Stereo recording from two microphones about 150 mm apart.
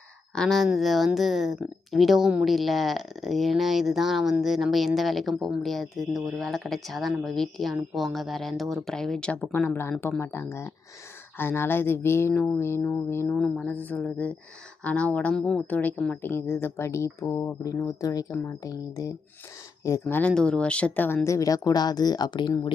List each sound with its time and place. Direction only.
0.3 s speech: centre (ahead or behind)
13.3 s speech: 5° left (ahead or behind); by 22.7 s 30° left (ahead or behind)